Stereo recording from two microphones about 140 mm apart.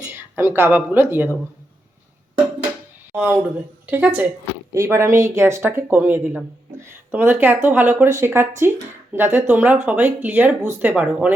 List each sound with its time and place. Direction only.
0.1 s speech: 15° right (ahead or behind)
3.1 s speech: 10° right (ahead or behind)